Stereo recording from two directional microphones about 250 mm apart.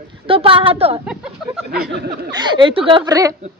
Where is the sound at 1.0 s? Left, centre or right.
Centre.